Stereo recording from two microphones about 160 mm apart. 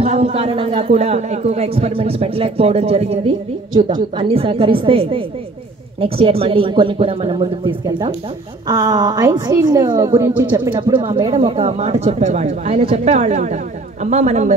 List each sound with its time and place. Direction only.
0.0 s a man's voice: 40° right (ahead or behind)
8.6 s a woman's voice: 25° right (ahead or behind)
10.7 s a man's voice: 30° right (ahead or behind); by 14.5 s 45° right (ahead or behind)